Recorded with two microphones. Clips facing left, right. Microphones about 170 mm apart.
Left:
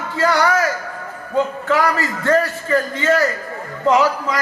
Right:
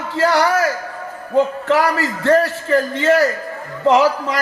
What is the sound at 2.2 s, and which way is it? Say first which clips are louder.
A man's voice: right 3 dB; 25° right (ahead or behind).